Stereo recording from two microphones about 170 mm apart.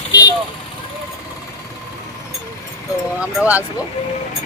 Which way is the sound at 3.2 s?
10° right (ahead or behind).